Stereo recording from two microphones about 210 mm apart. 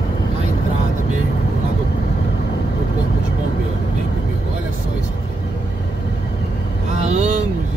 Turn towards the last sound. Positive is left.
turn(degrees=-30)  # may be behind; listen again after turning